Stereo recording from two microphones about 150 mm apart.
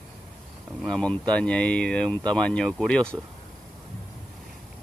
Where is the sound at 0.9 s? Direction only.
5° left (ahead or behind).